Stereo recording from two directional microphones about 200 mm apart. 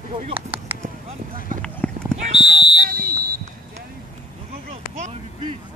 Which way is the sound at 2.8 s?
45° right (ahead or behind).